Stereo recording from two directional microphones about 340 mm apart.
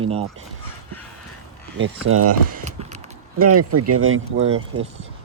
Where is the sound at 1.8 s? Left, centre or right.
Right.